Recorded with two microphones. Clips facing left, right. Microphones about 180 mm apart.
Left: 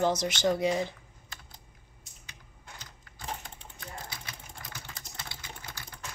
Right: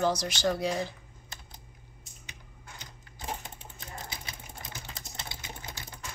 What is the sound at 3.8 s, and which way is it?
Sewing machine, 20° right (ahead or behind).